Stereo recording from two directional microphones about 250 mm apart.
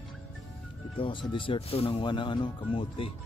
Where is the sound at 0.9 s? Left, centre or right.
Left.